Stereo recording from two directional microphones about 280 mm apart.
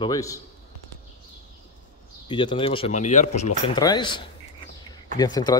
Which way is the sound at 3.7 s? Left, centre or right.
Centre.